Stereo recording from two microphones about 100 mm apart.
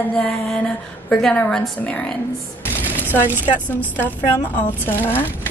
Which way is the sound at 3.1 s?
20° right (ahead or behind).